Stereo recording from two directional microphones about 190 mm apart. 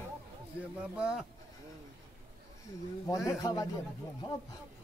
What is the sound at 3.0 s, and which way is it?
Speech, 15° left (ahead or behind).